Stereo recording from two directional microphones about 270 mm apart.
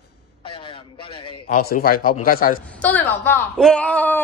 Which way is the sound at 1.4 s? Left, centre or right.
Left.